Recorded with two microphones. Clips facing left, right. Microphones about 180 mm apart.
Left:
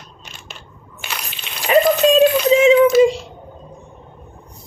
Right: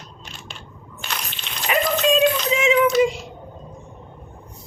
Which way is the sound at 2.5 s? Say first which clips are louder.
Left 8 dB; 35° left (ahead or behind).